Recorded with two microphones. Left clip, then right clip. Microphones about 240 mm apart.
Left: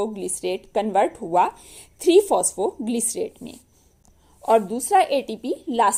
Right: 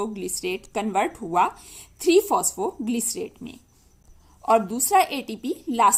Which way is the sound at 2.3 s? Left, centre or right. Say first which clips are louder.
Left 2 dB; right.